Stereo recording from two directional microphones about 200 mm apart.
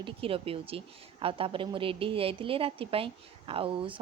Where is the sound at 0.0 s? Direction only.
25° right (ahead or behind).